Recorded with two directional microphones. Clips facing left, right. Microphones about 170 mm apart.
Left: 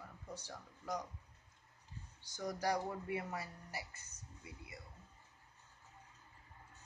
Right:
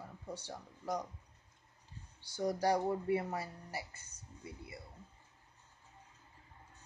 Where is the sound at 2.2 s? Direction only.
30° right (ahead or behind).